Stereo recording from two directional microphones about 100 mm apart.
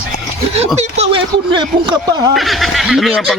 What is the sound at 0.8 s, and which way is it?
Speech, 90° right.